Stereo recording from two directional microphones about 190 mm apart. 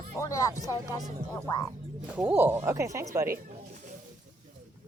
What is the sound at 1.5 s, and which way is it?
Speech, 20° left (ahead or behind).